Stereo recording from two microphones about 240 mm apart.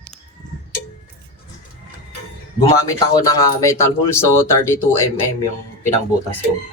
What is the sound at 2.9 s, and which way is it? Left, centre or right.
Speech, centre.